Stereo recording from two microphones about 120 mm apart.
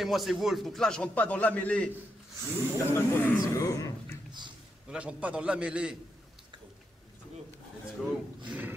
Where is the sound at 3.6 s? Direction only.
30° left (ahead or behind).